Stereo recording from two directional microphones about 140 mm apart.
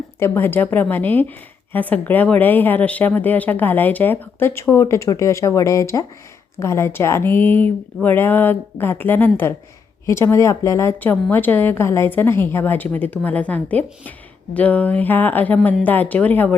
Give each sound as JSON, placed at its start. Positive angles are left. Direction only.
{"t": 0.2, "sound": "a woman's voice", "side_deg": 15}